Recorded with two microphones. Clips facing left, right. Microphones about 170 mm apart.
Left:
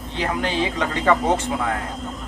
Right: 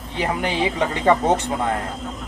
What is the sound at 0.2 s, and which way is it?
Speech, 15° right (ahead or behind).